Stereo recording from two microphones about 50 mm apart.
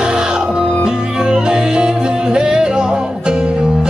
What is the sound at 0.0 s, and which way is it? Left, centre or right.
Music, centre.